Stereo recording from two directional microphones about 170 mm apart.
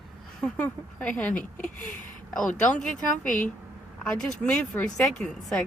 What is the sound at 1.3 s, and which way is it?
Speech, 50° left (ahead or behind).